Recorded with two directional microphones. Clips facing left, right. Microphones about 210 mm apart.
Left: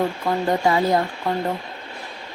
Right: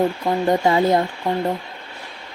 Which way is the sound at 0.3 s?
20° right (ahead or behind).